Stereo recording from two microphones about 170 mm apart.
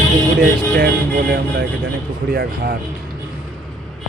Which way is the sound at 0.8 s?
65° right (ahead or behind).